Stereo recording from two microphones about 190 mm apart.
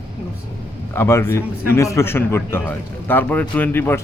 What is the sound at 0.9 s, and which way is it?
A man's voice, 15° left (ahead or behind).